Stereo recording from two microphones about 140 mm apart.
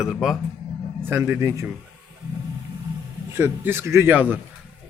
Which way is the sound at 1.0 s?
15° right (ahead or behind).